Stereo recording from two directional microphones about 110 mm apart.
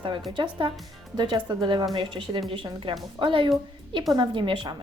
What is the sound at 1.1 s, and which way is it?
A woman's voice, 40° right (ahead or behind).